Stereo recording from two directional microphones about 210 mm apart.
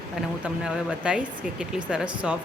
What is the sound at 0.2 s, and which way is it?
Speech, 5° right (ahead or behind).